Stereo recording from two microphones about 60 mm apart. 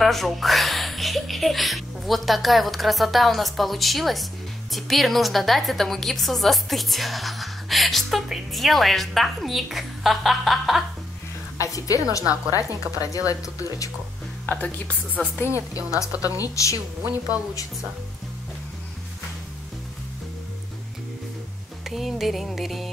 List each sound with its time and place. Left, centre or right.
0.0 s speech: centre
11.5 s a woman's voice: left
14.4 s a woman's voice: left
15.7 s a woman's voice: left
21.8 s speech: centre